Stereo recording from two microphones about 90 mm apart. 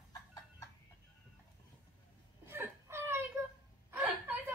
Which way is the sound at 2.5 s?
25° right (ahead or behind).